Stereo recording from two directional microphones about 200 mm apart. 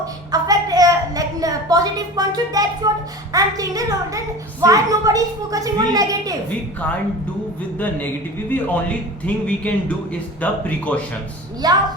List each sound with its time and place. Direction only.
0.0 s a sound: 20° right (ahead or behind)
3.3 s a woman's voice: 15° right (ahead or behind)
7.8 s a man's voice: 10° left (ahead or behind)
11.6 s a woman's voice: 20° right (ahead or behind)